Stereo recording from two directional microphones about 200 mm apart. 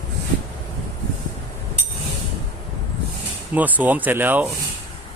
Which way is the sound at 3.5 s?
10° right (ahead or behind).